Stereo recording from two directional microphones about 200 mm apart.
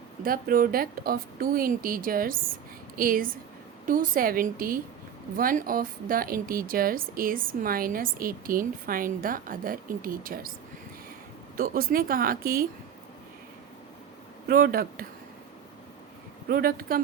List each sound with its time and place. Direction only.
0.2 s a woman's voice: 45° right (ahead or behind)
11.5 s speech: 45° right (ahead or behind)
14.4 s speech: 45° right (ahead or behind)
16.5 s speech: 45° right (ahead or behind)